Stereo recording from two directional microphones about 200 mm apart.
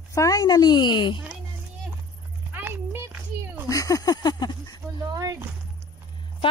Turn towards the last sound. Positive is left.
turn(degrees=-15)  # may be behind; listen again after turning